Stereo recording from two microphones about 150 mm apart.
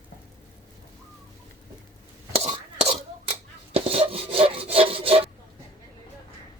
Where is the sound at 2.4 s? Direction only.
45° right (ahead or behind).